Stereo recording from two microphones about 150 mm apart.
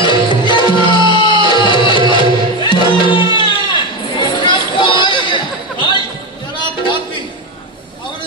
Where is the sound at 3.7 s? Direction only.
35° left (ahead or behind).